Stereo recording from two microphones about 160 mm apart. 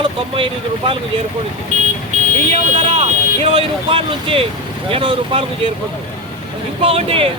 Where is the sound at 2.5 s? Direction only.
40° right (ahead or behind).